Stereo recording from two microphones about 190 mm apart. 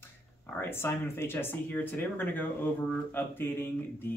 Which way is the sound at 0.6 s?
10° left (ahead or behind).